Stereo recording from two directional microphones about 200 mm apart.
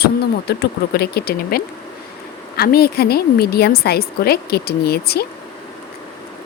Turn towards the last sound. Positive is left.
turn(degrees=50)  # may be behind; listen again after turning